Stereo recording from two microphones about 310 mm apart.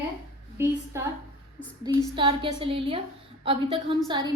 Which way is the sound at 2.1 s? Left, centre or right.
Centre.